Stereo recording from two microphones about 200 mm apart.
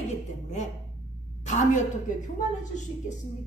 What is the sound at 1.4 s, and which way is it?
A woman's voice, 35° left (ahead or behind).